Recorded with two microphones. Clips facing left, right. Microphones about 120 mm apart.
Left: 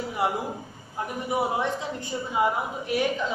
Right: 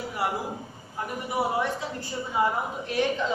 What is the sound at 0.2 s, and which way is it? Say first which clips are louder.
Speech: left 2 dB; 20° left (ahead or behind).